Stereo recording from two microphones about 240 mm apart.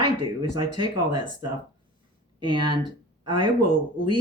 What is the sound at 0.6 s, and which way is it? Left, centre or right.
Speech, right.